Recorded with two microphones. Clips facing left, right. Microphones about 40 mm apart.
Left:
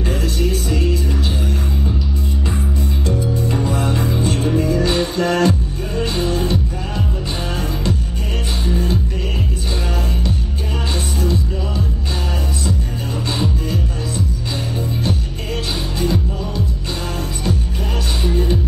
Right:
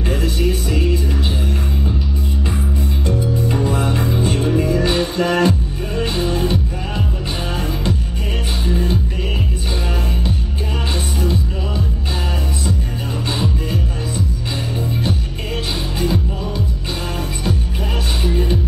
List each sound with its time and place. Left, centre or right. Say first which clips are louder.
0.0 s music: right 1 dB; centre
3.1 s music: right 1 dB; centre
16.0 s music: even; centre
18.2 s music: left 1 dB; centre